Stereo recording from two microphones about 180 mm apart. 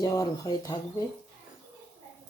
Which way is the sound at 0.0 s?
20° left (ahead or behind).